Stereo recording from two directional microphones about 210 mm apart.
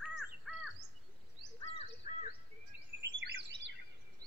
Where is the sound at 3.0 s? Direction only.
60° right (ahead or behind).